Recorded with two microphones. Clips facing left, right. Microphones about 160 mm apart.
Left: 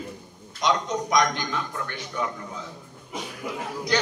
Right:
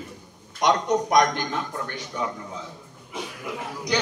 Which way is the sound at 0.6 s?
60° right (ahead or behind).